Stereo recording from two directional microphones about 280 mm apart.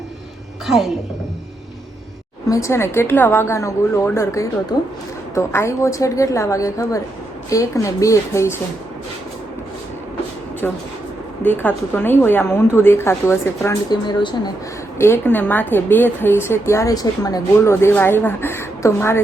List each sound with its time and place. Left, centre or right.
0.7 s a woman's voice: centre
2.5 s a woman's voice: centre
11.4 s a woman's voice: centre